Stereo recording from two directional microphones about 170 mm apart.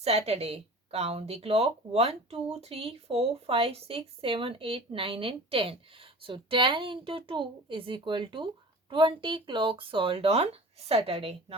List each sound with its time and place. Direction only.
0.0 s speech: 40° right (ahead or behind)